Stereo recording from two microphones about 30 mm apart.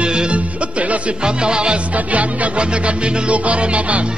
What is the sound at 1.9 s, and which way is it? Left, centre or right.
Music, right.